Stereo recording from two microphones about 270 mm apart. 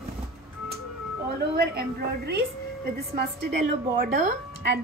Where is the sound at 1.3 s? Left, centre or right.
Right.